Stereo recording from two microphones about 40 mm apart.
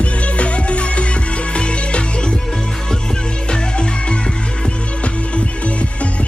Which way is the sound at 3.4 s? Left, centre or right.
Left.